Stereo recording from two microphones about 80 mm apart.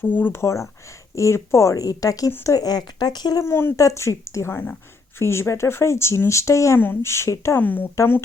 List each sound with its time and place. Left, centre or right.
0.0 s speech: left
0.3 s speech: left
2.6 s speech: left
3.4 s speech: left
6.7 s speech: left
7.6 s speech: left